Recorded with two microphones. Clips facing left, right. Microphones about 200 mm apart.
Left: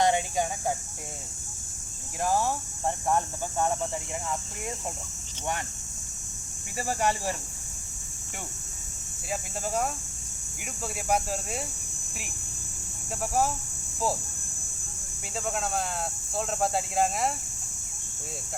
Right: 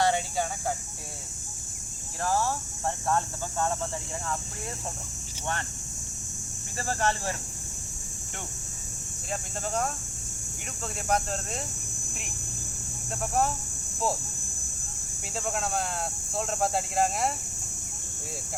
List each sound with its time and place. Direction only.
0.0 s cricket: 20° left (ahead or behind)
2.2 s speech: 15° left (ahead or behind)
6.7 s speech: 10° left (ahead or behind)
9.3 s speech: 5° left (ahead or behind)
15.4 s speech: centre (ahead or behind)